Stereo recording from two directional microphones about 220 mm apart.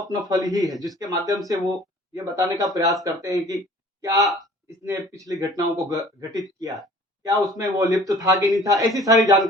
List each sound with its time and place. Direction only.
0.3 s a man's voice: 15° right (ahead or behind)